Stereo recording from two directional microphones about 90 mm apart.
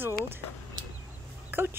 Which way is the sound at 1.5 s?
25° right (ahead or behind).